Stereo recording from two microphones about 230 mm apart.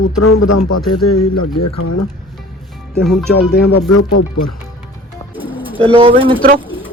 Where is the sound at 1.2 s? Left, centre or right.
Left.